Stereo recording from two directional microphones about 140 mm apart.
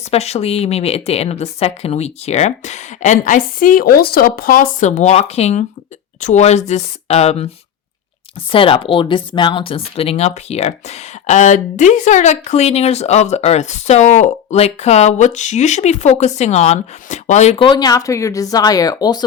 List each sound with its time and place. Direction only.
0.1 s speech: 50° left (ahead or behind)
17.6 s speech: 30° left (ahead or behind)